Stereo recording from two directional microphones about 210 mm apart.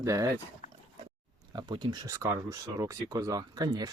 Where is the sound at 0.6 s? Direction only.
35° left (ahead or behind).